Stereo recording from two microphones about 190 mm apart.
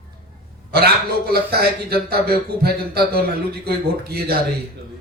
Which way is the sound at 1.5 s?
55° right (ahead or behind).